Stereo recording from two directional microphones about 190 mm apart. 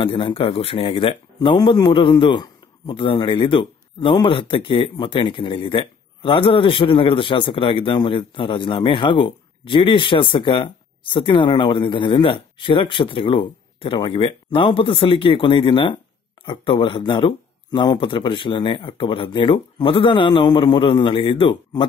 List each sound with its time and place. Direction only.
0.0 s speech: 30° left (ahead or behind)